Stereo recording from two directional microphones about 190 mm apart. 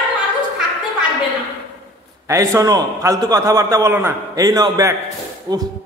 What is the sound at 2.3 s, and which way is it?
A man's voice, 15° right (ahead or behind).